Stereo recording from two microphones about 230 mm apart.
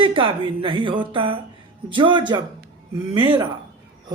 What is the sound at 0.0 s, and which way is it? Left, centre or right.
A woman's voice, right.